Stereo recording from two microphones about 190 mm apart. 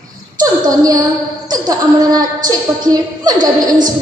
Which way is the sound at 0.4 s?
20° right (ahead or behind).